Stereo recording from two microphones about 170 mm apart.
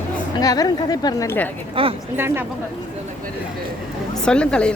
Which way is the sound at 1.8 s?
30° right (ahead or behind).